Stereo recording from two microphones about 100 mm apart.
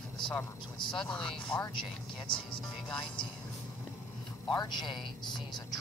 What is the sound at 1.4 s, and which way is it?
Speech, 55° left (ahead or behind).